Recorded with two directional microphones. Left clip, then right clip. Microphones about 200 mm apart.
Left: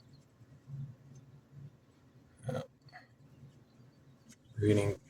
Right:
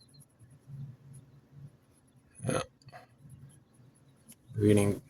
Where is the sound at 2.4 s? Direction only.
45° right (ahead or behind).